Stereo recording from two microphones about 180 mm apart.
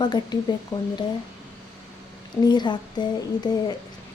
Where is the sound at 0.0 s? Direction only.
25° left (ahead or behind).